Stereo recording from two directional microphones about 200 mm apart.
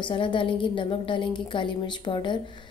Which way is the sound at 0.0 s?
25° left (ahead or behind).